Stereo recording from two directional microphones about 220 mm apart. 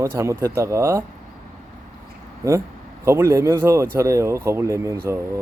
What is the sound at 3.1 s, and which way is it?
Speech, 10° right (ahead or behind).